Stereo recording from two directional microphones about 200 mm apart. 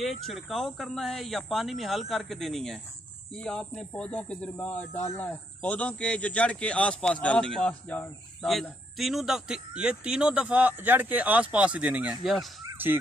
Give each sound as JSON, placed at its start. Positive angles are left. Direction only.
{"t": 0.2, "sound": "speech", "side_deg": 0}